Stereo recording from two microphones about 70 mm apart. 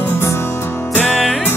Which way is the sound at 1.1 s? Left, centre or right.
Centre.